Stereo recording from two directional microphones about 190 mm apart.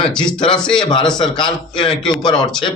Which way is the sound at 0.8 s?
25° left (ahead or behind).